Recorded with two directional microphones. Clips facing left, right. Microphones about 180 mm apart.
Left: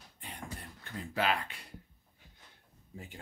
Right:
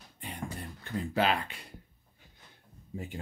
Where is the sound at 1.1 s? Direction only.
25° right (ahead or behind).